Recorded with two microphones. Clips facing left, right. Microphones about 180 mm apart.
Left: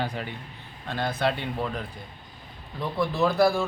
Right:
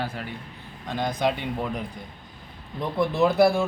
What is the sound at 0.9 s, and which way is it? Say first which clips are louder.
A man's voice: right 1 dB; 15° right (ahead or behind).